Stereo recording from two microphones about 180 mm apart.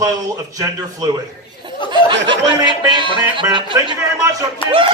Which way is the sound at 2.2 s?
25° right (ahead or behind).